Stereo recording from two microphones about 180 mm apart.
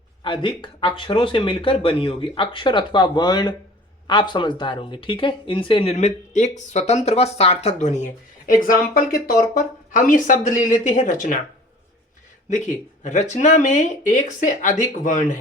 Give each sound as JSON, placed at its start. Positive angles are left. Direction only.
{"t": 0.2, "sound": "speech", "side_deg": 25}
{"t": 12.5, "sound": "speech", "side_deg": 40}